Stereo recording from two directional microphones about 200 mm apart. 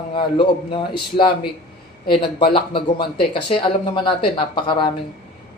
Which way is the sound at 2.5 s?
25° left (ahead or behind).